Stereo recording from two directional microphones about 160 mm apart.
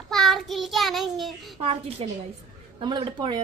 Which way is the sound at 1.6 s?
40° right (ahead or behind).